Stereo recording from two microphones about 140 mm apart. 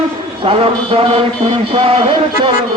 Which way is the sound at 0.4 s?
40° right (ahead or behind).